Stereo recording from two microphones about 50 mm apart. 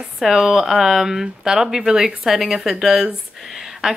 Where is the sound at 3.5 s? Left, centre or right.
Centre.